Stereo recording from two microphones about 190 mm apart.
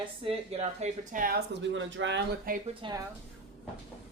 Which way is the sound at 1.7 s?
75° right (ahead or behind).